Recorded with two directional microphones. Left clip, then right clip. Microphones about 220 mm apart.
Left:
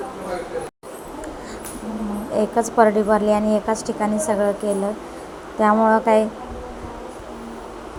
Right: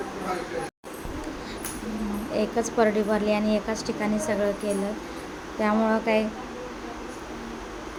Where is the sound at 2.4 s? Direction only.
10° left (ahead or behind).